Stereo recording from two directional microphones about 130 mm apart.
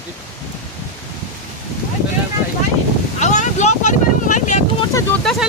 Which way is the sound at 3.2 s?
65° left (ahead or behind).